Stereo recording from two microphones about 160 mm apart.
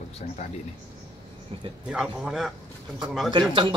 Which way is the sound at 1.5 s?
35° right (ahead or behind).